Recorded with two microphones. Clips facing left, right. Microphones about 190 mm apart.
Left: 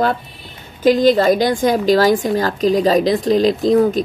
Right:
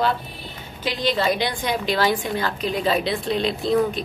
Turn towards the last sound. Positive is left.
turn(degrees=40)  # may be behind; listen again after turning